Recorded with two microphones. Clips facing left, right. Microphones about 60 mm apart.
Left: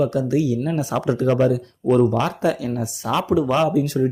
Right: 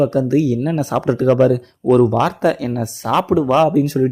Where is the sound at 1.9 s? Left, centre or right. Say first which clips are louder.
Right 4 dB; right.